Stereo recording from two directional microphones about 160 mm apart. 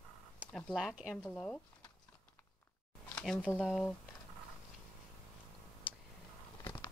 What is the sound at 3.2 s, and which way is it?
Speech, 10° left (ahead or behind).